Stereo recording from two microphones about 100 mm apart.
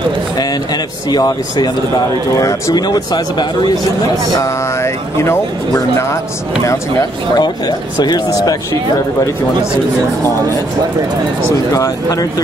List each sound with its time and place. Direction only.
1.1 s speech: 45° left (ahead or behind)
4.4 s speech: 30° left (ahead or behind)
6.6 s speech: 35° left (ahead or behind)
11.7 s speech: 35° left (ahead or behind)